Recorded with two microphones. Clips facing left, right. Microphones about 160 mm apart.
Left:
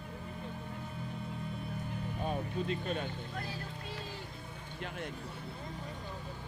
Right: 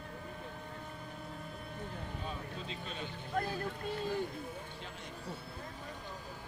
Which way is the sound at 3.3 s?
50° right (ahead or behind).